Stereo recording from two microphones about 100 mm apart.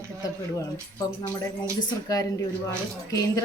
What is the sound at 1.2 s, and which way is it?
Speech, 45° left (ahead or behind).